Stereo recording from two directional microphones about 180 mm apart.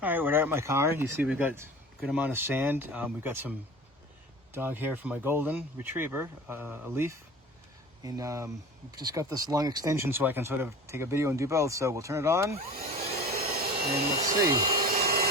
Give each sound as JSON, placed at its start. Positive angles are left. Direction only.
{"t": 0.0, "sound": "speech", "side_deg": -10}
{"t": 4.5, "sound": "speech", "side_deg": -10}
{"t": 13.1, "sound": "vacuum cleaner", "side_deg": -60}